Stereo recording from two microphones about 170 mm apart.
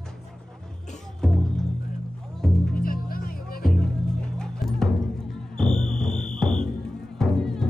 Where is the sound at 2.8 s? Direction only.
60° left (ahead or behind).